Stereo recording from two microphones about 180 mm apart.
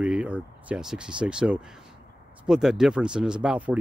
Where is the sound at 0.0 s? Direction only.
5° right (ahead or behind).